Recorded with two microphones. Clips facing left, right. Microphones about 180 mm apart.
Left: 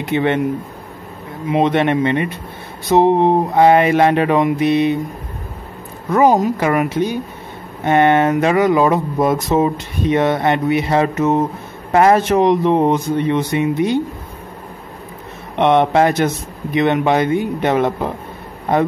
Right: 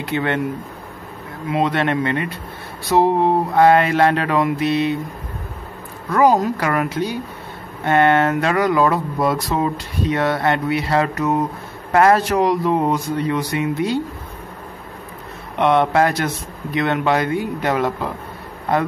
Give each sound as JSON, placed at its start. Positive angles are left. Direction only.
{"t": 0.0, "sound": "speech", "side_deg": 20}
{"t": 1.5, "sound": "speech", "side_deg": 20}
{"t": 6.0, "sound": "speech", "side_deg": 20}
{"t": 15.5, "sound": "speech", "side_deg": 20}